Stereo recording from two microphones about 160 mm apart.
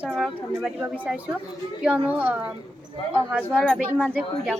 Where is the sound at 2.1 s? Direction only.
10° right (ahead or behind).